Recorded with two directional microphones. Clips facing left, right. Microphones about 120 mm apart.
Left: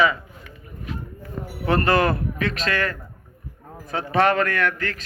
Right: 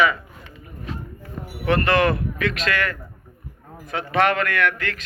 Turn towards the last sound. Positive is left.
turn(degrees=35)  # may be behind; listen again after turning